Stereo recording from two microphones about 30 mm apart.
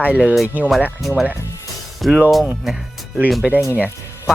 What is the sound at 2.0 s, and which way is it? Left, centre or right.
Speech, centre.